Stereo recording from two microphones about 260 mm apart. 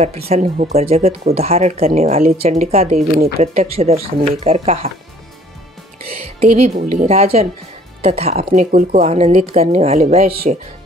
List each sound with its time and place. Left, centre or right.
0.0 s speech: right
6.2 s speech: right